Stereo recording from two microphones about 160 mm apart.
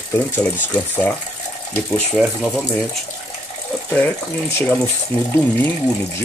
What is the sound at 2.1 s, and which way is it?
Speech, 5° right (ahead or behind).